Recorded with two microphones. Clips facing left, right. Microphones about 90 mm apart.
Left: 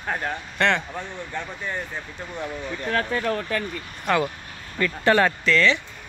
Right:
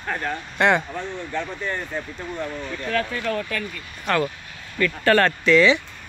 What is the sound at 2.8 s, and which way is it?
Speech, 30° left (ahead or behind).